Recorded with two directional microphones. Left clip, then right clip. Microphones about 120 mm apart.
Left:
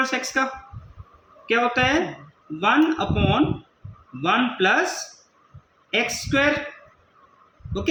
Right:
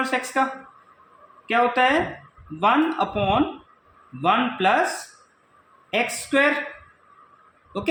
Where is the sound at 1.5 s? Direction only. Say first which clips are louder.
Right 1 dB; 25° right (ahead or behind).